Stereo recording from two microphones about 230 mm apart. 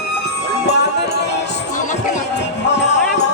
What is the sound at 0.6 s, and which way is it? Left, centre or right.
Music, left.